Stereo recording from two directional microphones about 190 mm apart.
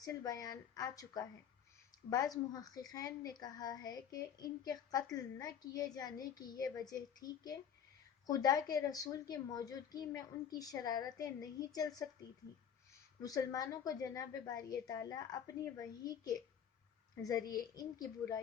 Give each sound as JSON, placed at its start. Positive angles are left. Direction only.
{"t": 0.0, "sound": "a woman's voice", "side_deg": 20}
{"t": 13.2, "sound": "a woman's voice", "side_deg": 20}
{"t": 17.5, "sound": "a woman's voice", "side_deg": 20}